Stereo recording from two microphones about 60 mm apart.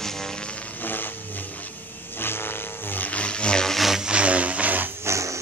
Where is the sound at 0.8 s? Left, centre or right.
Left.